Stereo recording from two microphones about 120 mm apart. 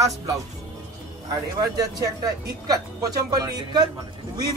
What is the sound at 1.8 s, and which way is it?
Speech, 30° right (ahead or behind).